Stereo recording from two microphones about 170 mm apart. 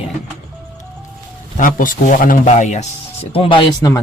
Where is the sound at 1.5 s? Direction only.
50° left (ahead or behind).